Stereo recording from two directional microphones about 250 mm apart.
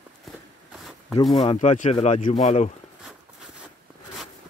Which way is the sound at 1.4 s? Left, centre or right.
Left.